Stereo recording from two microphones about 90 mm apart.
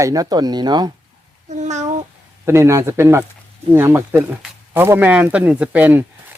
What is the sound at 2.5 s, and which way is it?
A man's voice, 30° right (ahead or behind).